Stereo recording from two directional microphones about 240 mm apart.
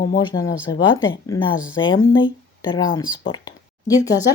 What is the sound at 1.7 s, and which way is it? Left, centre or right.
Speech, left.